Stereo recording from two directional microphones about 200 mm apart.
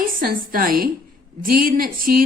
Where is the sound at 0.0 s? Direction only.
45° right (ahead or behind).